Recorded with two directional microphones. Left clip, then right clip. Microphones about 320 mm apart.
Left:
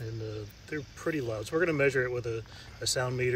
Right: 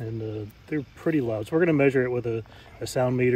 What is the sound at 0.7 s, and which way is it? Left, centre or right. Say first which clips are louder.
Speech: right 6 dB; right.